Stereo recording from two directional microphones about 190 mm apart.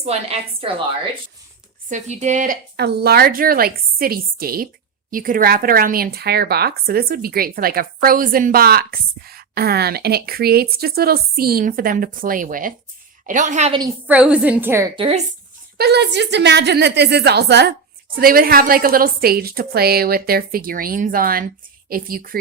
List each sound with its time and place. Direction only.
0.0 s speech: 35° right (ahead or behind)
1.9 s speech: 35° right (ahead or behind)
2.7 s speech: 60° right (ahead or behind); by 13.7 s 35° right (ahead or behind)
14.1 s a woman's voice: 5° right (ahead or behind)
14.9 s speech: 30° right (ahead or behind)
15.8 s speech: 60° right (ahead or behind)